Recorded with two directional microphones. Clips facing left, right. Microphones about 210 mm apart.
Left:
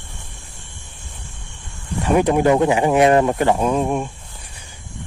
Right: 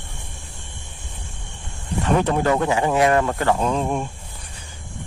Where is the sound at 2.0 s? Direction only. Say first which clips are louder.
Left 4 dB; 15° left (ahead or behind).